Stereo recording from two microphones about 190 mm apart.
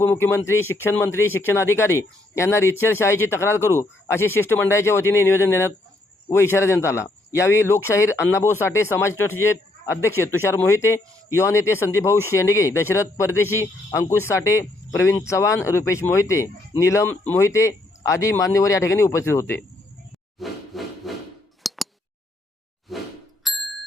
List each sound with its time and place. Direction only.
0.0 s speech: 10° left (ahead or behind)
20.4 s rub: centre (ahead or behind)
21.6 s scissors: centre (ahead or behind)
22.9 s a sound: centre (ahead or behind)
23.4 s bicycle bell: centre (ahead or behind)